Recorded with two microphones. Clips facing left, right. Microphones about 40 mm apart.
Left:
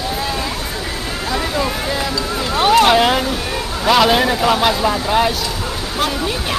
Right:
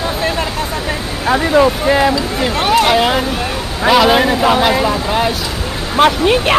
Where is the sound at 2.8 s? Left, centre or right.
Centre.